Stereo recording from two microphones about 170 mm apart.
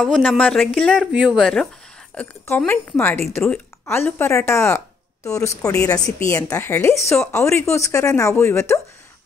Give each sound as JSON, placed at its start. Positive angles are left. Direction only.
{"t": 0.0, "sound": "speech", "side_deg": 0}